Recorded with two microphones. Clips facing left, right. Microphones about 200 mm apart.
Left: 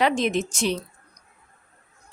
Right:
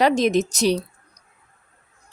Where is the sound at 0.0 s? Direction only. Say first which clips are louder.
Right 4 dB; 40° right (ahead or behind).